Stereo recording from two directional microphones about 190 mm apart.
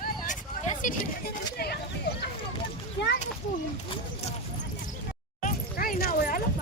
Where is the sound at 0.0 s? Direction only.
40° left (ahead or behind).